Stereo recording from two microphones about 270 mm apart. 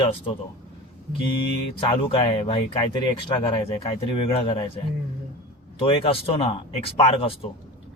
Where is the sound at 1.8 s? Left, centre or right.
Centre.